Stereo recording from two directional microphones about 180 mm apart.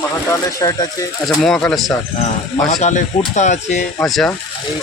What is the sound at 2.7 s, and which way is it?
Speech, 40° left (ahead or behind).